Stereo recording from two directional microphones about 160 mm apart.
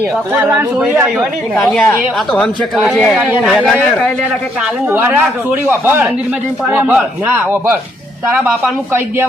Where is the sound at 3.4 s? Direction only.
5° left (ahead or behind).